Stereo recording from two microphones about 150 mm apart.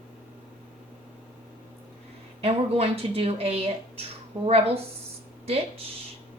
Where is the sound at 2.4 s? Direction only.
40° right (ahead or behind).